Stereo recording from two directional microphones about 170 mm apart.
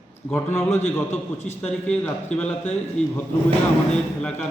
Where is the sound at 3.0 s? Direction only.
5° left (ahead or behind).